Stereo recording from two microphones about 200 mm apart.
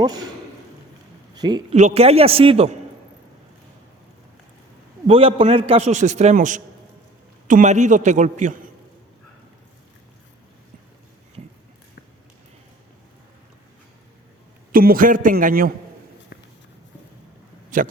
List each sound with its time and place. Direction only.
0.0 s a man's voice: 20° right (ahead or behind)
1.4 s a man's voice: 20° right (ahead or behind)
1.7 s a man's voice: 35° right (ahead or behind)
5.0 s a man's voice: 30° right (ahead or behind)
14.7 s a man's voice: 45° right (ahead or behind)
16.3 s walk: 50° left (ahead or behind)
17.7 s a man's voice: 40° right (ahead or behind)